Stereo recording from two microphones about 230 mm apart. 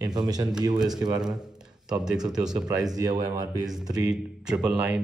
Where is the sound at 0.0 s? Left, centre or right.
Centre.